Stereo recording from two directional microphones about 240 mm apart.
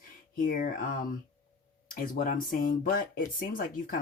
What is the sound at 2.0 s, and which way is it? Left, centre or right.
Speech, left.